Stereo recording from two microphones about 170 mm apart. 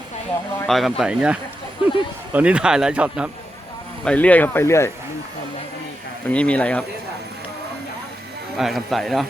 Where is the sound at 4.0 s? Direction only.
5° left (ahead or behind).